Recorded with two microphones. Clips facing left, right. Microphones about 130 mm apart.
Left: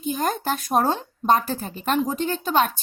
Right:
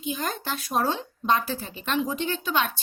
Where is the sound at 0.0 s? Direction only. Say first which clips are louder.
Left 6 dB; 45° left (ahead or behind).